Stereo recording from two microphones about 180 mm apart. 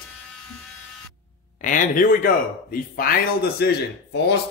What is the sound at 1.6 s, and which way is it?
Speech, 45° left (ahead or behind).